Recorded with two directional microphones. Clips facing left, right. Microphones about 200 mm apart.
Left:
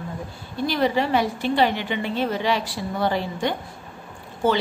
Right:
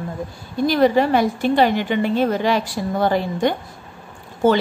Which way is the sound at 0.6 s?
45° right (ahead or behind).